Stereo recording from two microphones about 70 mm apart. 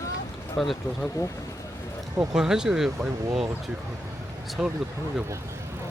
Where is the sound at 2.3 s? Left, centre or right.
Centre.